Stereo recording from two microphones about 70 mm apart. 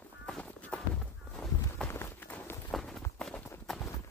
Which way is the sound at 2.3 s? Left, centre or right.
Left.